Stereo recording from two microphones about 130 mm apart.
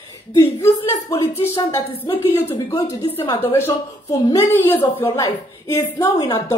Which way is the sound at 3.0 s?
45° left (ahead or behind).